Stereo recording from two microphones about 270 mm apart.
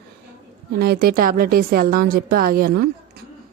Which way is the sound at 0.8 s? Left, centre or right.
Right.